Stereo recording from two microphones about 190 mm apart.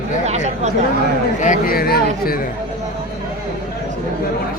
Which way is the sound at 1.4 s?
45° left (ahead or behind).